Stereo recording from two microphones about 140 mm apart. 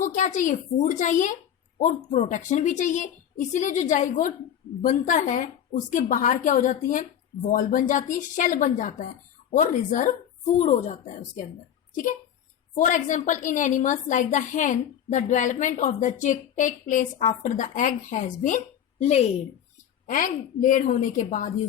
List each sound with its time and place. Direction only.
0.0 s a woman's voice: 60° left (ahead or behind)
10.6 s a woman's voice: 55° left (ahead or behind)
12.7 s a woman's voice: 65° left (ahead or behind)
20.1 s a woman's voice: 75° left (ahead or behind)